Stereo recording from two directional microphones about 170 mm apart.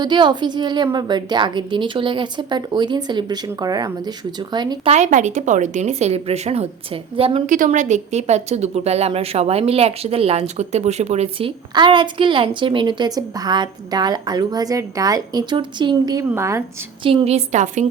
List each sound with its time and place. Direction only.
0.0 s speech: 25° right (ahead or behind)
4.9 s speech: 45° right (ahead or behind)
7.4 s speech: 50° right (ahead or behind); by 16.6 s 15° right (ahead or behind)
17.0 s speech: 30° right (ahead or behind)